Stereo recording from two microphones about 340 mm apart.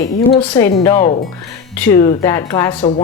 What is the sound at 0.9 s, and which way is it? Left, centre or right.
Speech, left.